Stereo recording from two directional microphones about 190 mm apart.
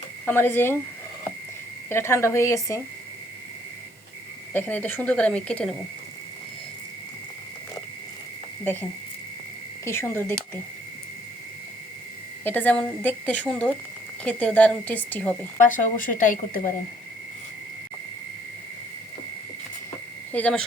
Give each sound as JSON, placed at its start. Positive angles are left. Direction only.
{"t": 0.3, "sound": "a woman's voice", "side_deg": 10}
{"t": 1.9, "sound": "a woman's voice", "side_deg": 15}
{"t": 4.5, "sound": "a woman's voice", "side_deg": 10}
{"t": 8.6, "sound": "a woman's voice", "side_deg": 10}
{"t": 12.5, "sound": "a woman's voice", "side_deg": 10}
{"t": 15.5, "sound": "speech", "side_deg": 45}
{"t": 20.3, "sound": "speech", "side_deg": 5}